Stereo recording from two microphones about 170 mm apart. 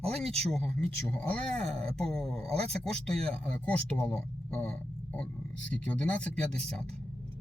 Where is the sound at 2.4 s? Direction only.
35° right (ahead or behind).